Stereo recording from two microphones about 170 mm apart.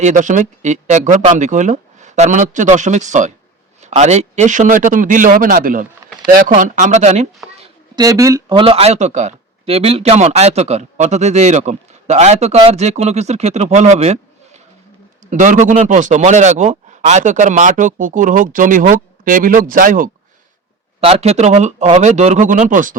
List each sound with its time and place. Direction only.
0.0 s speech: 45° right (ahead or behind)
7.9 s speech: 20° right (ahead or behind)
8.5 s speech: 35° right (ahead or behind); by 20.1 s 50° right (ahead or behind)
21.0 s speech: 35° right (ahead or behind)